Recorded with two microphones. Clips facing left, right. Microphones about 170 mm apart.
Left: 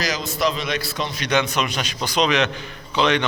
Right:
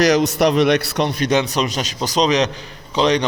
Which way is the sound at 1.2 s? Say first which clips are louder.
Right 1 dB; 35° right (ahead or behind).